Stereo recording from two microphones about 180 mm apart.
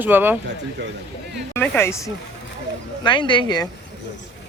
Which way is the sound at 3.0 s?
25° left (ahead or behind).